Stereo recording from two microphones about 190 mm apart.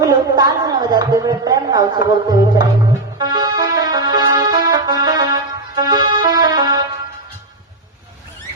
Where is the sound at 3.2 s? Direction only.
20° right (ahead or behind).